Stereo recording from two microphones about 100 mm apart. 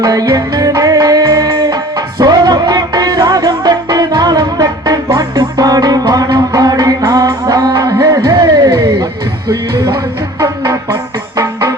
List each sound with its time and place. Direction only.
0.0 s music: 40° right (ahead or behind)
10.4 s music: 30° right (ahead or behind)